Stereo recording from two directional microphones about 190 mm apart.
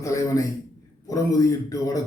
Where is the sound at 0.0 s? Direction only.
15° left (ahead or behind).